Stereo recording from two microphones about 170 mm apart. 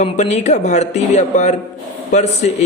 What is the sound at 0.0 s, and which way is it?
A man's voice, 40° left (ahead or behind).